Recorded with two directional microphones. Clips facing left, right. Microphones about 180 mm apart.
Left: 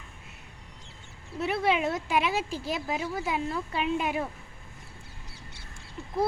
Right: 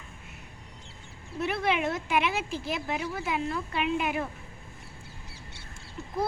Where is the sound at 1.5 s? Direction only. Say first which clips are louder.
Left 2 dB; 30° left (ahead or behind).